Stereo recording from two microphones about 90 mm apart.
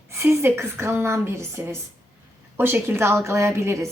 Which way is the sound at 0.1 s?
25° right (ahead or behind).